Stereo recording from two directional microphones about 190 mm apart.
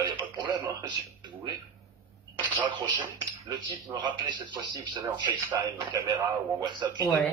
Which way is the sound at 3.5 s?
25° right (ahead or behind).